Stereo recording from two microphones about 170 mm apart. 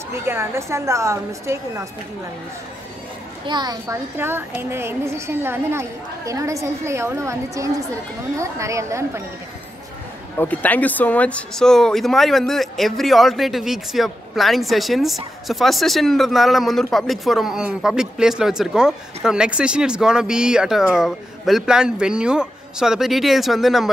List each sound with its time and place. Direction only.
0.1 s a woman's voice: 15° right (ahead or behind)
3.4 s a woman's voice: 25° right (ahead or behind)
10.4 s speech: 10° left (ahead or behind)